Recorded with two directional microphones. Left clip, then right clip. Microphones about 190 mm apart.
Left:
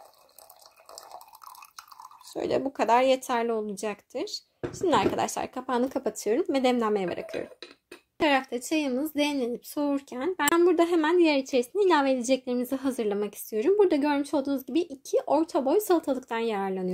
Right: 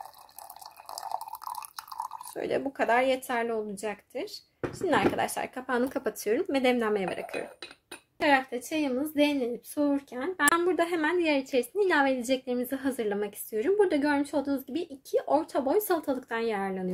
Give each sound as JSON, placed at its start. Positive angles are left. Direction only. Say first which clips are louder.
{"t": 0.9, "sound": "water", "louder": "right 10 dB", "side_deg": -15}
{"t": 2.3, "sound": "a woman's voice", "louder": "left 3 dB", "side_deg": 25}
{"t": 8.2, "sound": "a woman's voice", "louder": "even", "side_deg": 40}